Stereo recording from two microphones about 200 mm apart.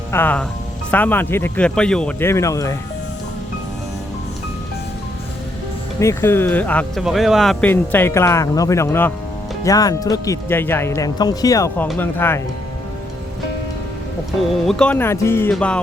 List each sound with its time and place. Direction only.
0.1 s speech: 10° left (ahead or behind)
6.0 s speech: 15° left (ahead or behind)
14.5 s speech: centre (ahead or behind)
15.5 s music: 5° left (ahead or behind)